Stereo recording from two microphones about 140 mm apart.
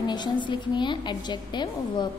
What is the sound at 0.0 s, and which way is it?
A woman's voice, 30° left (ahead or behind).